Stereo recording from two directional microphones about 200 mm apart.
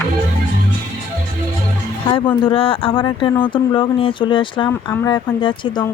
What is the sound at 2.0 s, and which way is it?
Speech, 25° left (ahead or behind).